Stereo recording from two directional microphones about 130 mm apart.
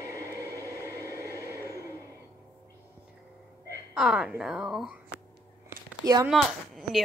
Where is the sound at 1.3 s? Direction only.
20° left (ahead or behind).